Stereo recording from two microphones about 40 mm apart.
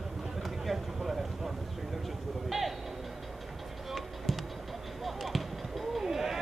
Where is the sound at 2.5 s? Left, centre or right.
Centre.